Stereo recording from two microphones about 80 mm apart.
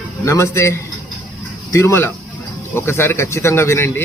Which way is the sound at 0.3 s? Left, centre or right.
Left.